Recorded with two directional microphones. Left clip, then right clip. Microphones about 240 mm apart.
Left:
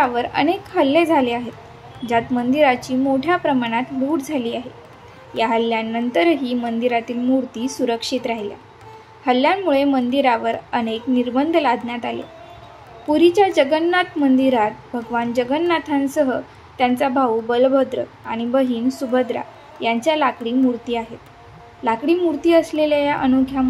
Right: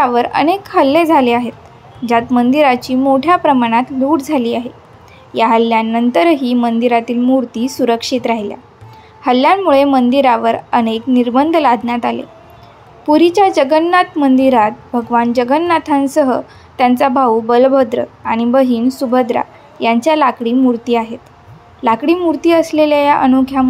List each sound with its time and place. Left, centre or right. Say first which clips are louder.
0.0 s a woman's voice: right 6 dB; centre